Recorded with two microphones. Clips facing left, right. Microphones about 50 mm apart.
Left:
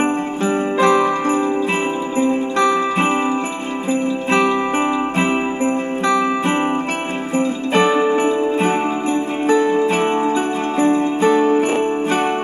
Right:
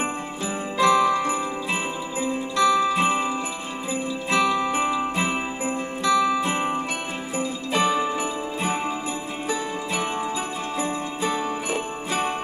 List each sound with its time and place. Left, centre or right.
0.0 s jingle bell: left
2.1 s music: left
4.3 s music: left
6.0 s jingle bell: left
7.3 s music: left
9.5 s jingle bell: left